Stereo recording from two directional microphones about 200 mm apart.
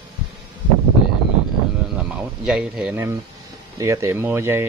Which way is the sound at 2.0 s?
5° right (ahead or behind).